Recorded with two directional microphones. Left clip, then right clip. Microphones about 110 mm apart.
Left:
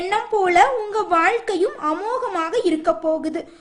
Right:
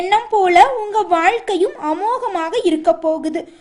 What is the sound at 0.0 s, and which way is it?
A woman's voice, 15° right (ahead or behind).